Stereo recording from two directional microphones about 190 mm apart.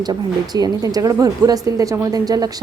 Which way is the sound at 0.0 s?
20° right (ahead or behind).